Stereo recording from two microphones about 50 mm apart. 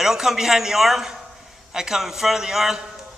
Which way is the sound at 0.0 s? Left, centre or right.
Centre.